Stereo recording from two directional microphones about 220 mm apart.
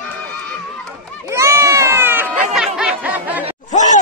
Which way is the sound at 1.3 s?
15° right (ahead or behind).